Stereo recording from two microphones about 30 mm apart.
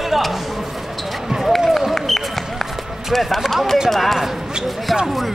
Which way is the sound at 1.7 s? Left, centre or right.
Centre.